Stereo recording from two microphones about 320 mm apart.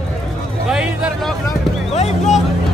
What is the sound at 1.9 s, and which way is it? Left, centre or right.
Speech, centre.